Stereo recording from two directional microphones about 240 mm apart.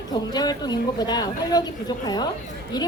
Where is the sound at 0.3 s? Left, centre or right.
Centre.